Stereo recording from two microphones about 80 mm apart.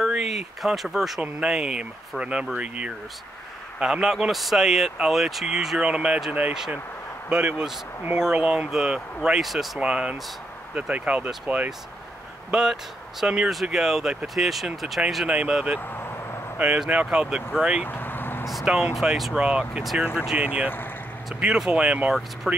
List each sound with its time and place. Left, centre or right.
0.0 s speech: centre
9.8 s speech: centre
15.9 s vehicle: left
16.5 s speech: centre
17.8 s vehicle: left
18.5 s speech: centre